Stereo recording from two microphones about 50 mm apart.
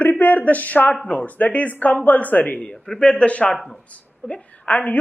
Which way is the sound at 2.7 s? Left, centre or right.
Centre.